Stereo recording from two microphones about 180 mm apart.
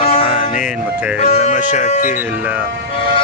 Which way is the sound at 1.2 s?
35° left (ahead or behind).